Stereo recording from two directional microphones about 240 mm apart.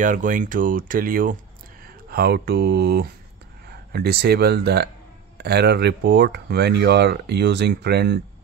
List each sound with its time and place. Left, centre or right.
0.0 s speech: right